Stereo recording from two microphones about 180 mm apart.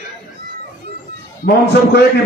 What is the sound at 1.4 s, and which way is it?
Speech, 65° left (ahead or behind).